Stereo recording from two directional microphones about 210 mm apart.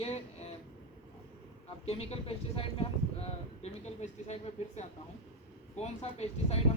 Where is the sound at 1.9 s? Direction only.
30° left (ahead or behind).